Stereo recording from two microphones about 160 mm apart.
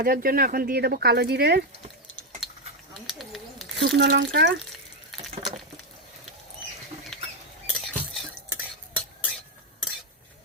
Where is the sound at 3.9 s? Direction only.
90° right.